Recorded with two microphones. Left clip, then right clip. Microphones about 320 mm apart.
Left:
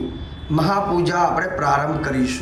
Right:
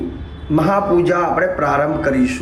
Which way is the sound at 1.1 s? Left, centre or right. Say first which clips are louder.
Right 3 dB; centre.